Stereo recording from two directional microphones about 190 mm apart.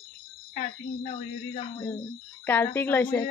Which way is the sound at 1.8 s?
10° left (ahead or behind).